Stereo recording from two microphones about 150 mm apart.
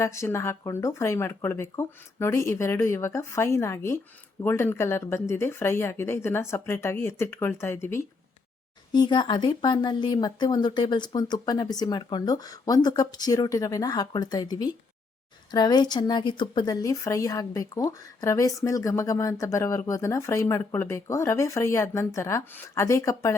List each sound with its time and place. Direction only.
0.0 s a woman's voice: 20° left (ahead or behind)
8.9 s a woman's voice: 30° left (ahead or behind)